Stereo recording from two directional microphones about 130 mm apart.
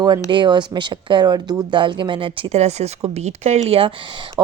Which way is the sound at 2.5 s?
55° right (ahead or behind).